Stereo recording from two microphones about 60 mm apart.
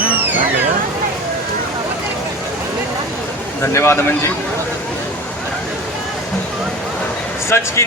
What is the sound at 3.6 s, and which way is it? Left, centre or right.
Speech, left.